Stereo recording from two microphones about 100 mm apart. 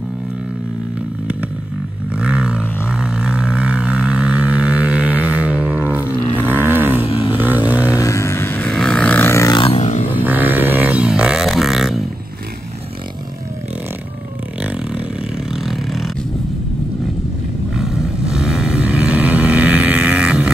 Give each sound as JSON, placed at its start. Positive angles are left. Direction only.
{"t": 2.1, "sound": "a sound", "side_deg": -10}
{"t": 6.3, "sound": "roaring cats", "side_deg": -20}
{"t": 7.1, "sound": "vehicle", "side_deg": 65}
{"t": 7.3, "sound": "vehicle", "side_deg": -15}
{"t": 8.0, "sound": "vehicle", "side_deg": 30}
{"t": 8.6, "sound": "burping", "side_deg": 5}
{"t": 9.6, "sound": "a sound", "side_deg": 80}
{"t": 10.1, "sound": "a sound", "side_deg": -20}
{"t": 15.6, "sound": "vehicle", "side_deg": 0}
{"t": 17.7, "sound": "vehicle", "side_deg": -5}